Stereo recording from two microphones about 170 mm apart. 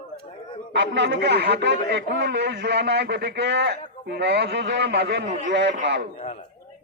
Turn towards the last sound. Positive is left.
turn(degrees=-90)